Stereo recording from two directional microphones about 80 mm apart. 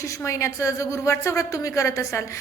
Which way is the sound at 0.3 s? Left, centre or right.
Left.